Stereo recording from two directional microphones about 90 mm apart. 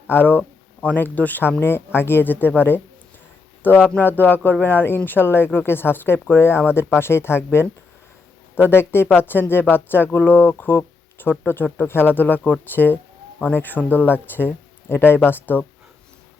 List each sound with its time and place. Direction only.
0.1 s speech: 20° left (ahead or behind)
3.8 s speech: 15° left (ahead or behind)